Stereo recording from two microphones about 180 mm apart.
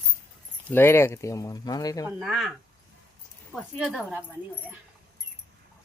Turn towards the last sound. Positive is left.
turn(degrees=0)  # may be behind; listen again after turning